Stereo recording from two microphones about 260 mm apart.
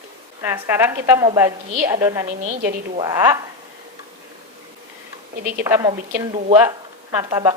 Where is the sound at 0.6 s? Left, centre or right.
Centre.